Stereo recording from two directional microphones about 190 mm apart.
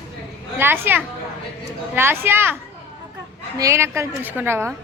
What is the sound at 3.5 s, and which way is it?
Speech, 15° right (ahead or behind).